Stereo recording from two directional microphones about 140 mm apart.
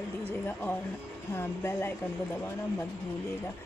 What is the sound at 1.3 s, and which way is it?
Speech, 20° left (ahead or behind).